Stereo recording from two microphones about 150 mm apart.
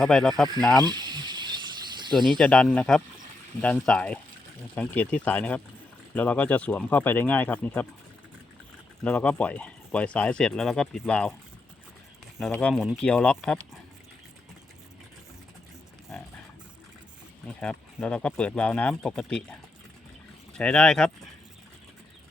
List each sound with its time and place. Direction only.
0.0 s speech: centre (ahead or behind)
0.9 s snake: 30° right (ahead or behind)
2.4 s speech: 5° left (ahead or behind)
9.0 s speech: 10° left (ahead or behind)
12.4 s speech: 10° left (ahead or behind)
17.6 s speech: 5° left (ahead or behind)
20.5 s speech: 5° left (ahead or behind)